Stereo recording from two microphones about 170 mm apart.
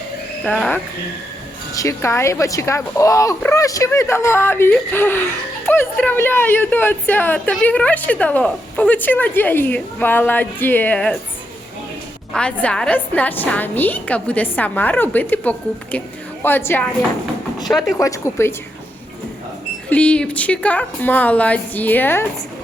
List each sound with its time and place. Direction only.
0.4 s speech: 10° left (ahead or behind)
12.3 s speech: 5° left (ahead or behind)
17.7 s speech: centre (ahead or behind)
17.9 s speech: 15° left (ahead or behind)
19.9 s speech: 5° left (ahead or behind)